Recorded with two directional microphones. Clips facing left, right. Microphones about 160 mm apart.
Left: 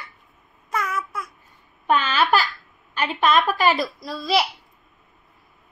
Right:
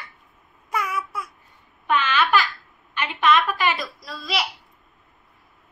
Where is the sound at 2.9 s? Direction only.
35° left (ahead or behind).